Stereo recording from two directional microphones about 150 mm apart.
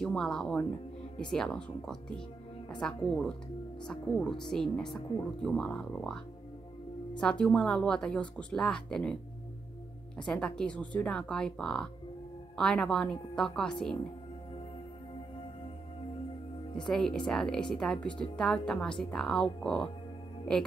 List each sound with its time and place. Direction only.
0.0 s a woman's voice: 5° left (ahead or behind)
7.2 s a woman's voice: 5° left (ahead or behind)
10.1 s a woman's voice: 5° left (ahead or behind)
16.7 s a woman's voice: 5° left (ahead or behind)